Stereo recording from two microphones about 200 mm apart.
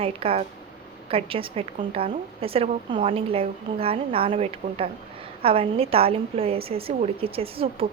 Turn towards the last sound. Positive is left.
turn(degrees=-30)  # may be behind; listen again after turning